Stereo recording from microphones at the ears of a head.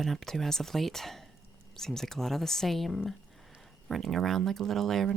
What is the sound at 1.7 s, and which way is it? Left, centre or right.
Speech, centre.